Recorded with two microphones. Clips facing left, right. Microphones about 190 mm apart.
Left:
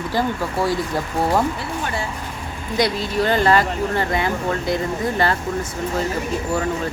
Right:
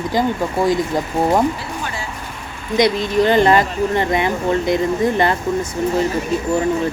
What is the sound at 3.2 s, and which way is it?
Speech, 20° right (ahead or behind).